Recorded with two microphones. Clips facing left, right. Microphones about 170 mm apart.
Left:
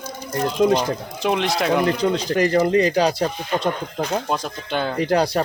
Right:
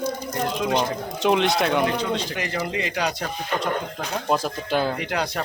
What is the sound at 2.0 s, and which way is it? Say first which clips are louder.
Speech: left 7 dB; 40° left (ahead or behind).